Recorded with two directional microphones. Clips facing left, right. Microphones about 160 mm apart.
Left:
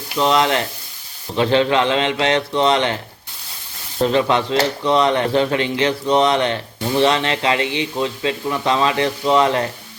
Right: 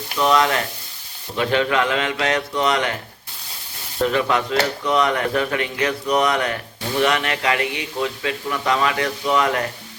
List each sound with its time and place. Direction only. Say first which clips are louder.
0.2 s speech: left 1 dB; 25° left (ahead or behind)
4.0 s speech: left 3 dB; 30° left (ahead or behind)